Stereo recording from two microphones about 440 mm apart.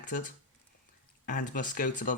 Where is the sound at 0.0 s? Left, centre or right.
Centre.